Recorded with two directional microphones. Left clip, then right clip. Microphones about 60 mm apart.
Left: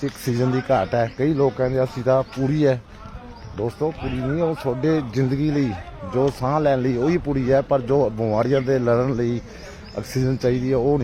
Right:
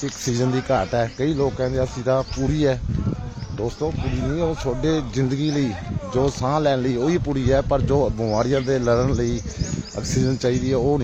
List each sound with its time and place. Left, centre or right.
0.3 s speech: centre
1.5 s speech: centre
2.5 s speech: centre
5.2 s speech: centre